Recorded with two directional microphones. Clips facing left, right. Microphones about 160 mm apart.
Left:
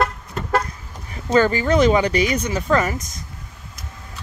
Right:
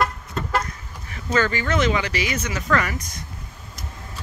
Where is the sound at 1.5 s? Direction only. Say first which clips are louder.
Left 6 dB; 35° left (ahead or behind).